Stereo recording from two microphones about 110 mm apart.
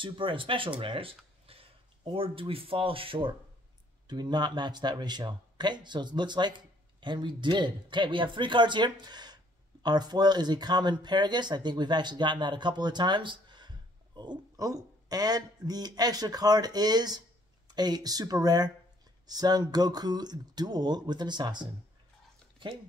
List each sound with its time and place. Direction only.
0.0 s speech: 50° right (ahead or behind)
4.1 s speech: 40° right (ahead or behind)